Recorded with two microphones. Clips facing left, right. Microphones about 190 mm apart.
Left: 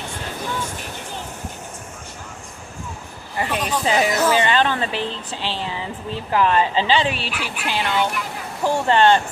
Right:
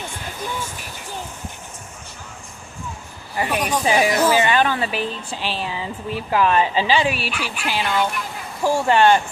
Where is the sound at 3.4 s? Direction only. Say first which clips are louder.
Right 1 dB; 15° right (ahead or behind).